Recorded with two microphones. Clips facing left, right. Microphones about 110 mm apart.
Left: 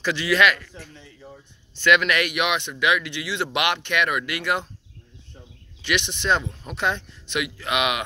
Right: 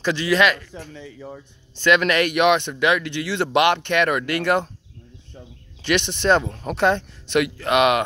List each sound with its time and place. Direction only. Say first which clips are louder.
0.0 s speech: right 2 dB; 30° right (ahead or behind)
1.8 s speech: right 2 dB; 30° right (ahead or behind)
5.8 s speech: right 4 dB; 35° right (ahead or behind)